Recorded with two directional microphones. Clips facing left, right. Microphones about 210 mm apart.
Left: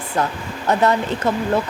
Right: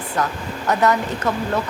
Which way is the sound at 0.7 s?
30° left (ahead or behind).